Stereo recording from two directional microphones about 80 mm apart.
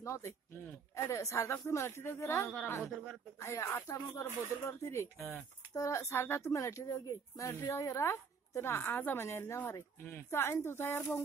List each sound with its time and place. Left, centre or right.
0.0 s a woman's voice: left